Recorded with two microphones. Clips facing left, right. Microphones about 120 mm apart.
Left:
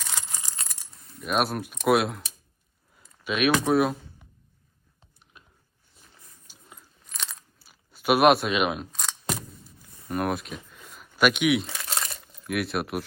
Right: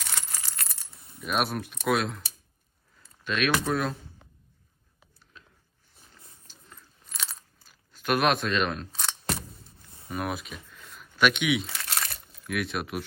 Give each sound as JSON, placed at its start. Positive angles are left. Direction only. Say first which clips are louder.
{"t": 0.0, "sound": "keys jangling", "louder": "left 1 dB", "side_deg": 20}
{"t": 1.2, "sound": "speech", "louder": "left 2 dB", "side_deg": 0}
{"t": 3.2, "sound": "speech", "louder": "left 4 dB", "side_deg": 5}
{"t": 6.5, "sound": "a sound", "louder": "left 2 dB", "side_deg": 10}
{"t": 7.6, "sound": "speech", "louder": "left 5 dB", "side_deg": 10}
{"t": 8.9, "sound": "a sound", "louder": "even", "side_deg": 0}
{"t": 10.1, "sound": "speech", "louder": "left 5 dB", "side_deg": 0}
{"t": 11.9, "sound": "crumpling", "louder": "left 1 dB", "side_deg": 25}
{"t": 12.4, "sound": "speech", "louder": "left 3 dB", "side_deg": 0}